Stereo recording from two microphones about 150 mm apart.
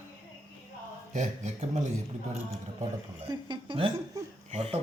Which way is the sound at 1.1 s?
50° right (ahead or behind).